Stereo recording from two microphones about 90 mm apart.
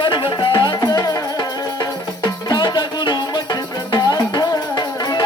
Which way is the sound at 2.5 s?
55° left (ahead or behind).